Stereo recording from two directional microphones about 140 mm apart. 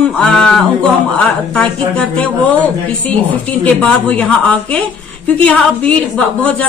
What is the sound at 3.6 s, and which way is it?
A woman's voice, 10° left (ahead or behind).